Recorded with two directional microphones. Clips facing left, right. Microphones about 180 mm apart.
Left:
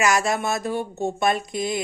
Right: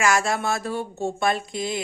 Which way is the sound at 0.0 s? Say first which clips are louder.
Left 1 dB; 20° left (ahead or behind).